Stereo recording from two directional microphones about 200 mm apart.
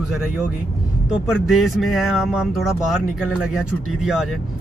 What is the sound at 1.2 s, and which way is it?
Speech, centre (ahead or behind).